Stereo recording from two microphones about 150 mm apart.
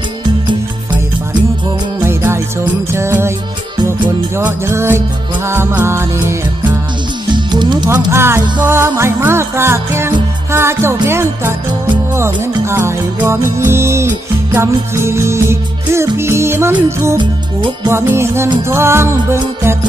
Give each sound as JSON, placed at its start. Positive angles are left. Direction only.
{"t": 2.0, "sound": "music", "side_deg": -15}
{"t": 4.4, "sound": "music", "side_deg": -15}
{"t": 7.3, "sound": "music", "side_deg": -30}
{"t": 8.1, "sound": "music", "side_deg": -15}
{"t": 17.2, "sound": "music", "side_deg": -30}
{"t": 17.8, "sound": "music", "side_deg": -15}